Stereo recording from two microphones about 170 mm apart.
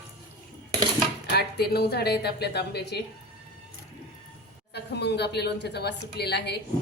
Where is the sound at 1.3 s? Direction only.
70° left (ahead or behind).